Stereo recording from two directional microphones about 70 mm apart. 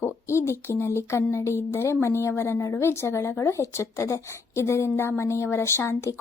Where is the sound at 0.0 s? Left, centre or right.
Left.